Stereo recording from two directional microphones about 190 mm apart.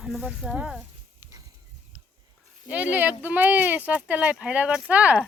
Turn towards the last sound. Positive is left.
turn(degrees=-5)  # may be behind; listen again after turning